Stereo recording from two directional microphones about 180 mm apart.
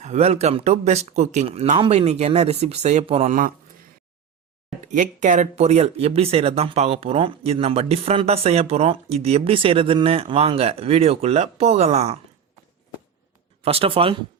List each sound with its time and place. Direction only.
0.0 s speech: 35° right (ahead or behind)
4.9 s speech: 45° right (ahead or behind)
13.6 s speech: 35° right (ahead or behind)